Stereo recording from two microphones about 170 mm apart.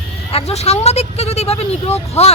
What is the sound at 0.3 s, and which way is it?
Speech, 35° left (ahead or behind).